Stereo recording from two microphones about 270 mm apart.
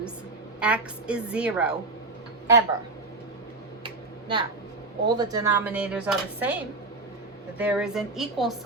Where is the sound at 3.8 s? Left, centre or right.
Centre.